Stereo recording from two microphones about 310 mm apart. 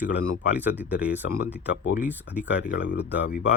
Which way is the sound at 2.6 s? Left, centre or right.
Left.